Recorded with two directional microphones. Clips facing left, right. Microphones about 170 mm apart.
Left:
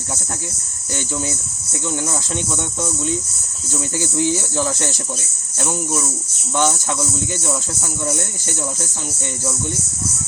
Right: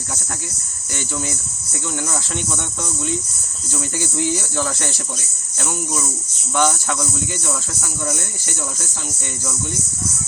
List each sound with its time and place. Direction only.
2.0 s speech: 15° left (ahead or behind)
6.6 s speech: 15° left (ahead or behind)